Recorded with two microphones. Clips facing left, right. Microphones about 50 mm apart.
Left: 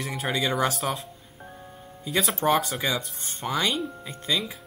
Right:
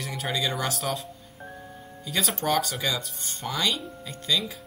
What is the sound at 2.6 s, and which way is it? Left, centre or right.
Speech, centre.